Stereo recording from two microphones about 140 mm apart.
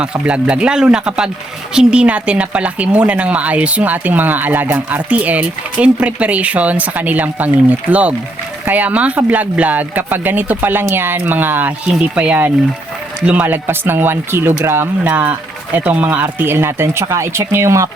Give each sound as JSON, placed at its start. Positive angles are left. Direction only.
{"t": 0.0, "sound": "speech", "side_deg": -10}